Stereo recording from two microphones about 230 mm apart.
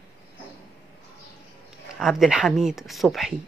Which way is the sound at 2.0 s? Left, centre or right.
Centre.